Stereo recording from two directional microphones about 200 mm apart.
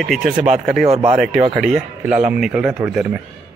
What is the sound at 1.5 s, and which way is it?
Speech, centre (ahead or behind).